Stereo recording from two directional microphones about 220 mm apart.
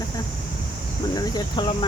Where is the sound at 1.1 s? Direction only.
20° left (ahead or behind).